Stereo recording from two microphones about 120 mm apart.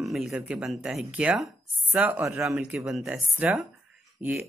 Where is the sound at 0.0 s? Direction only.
Centre (ahead or behind).